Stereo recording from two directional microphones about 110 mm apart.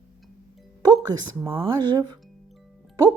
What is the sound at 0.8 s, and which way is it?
Music, 35° right (ahead or behind).